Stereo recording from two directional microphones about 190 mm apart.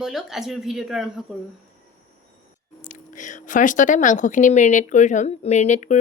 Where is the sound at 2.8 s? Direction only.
40° left (ahead or behind).